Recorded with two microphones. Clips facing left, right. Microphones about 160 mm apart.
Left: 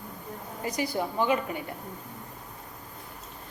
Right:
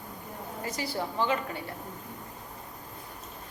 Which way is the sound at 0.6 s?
20° left (ahead or behind).